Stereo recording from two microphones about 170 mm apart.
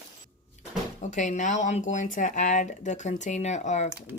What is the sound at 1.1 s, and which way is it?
Speech, 50° left (ahead or behind).